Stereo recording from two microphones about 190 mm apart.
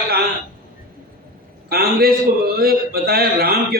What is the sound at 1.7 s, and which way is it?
A man's voice, 55° right (ahead or behind).